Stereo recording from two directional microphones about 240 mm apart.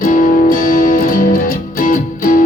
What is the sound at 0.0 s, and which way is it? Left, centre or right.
Music, left.